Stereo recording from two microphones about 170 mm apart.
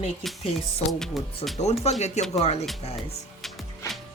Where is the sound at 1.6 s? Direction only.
40° left (ahead or behind).